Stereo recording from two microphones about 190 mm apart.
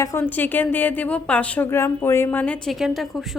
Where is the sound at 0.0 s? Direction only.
15° left (ahead or behind).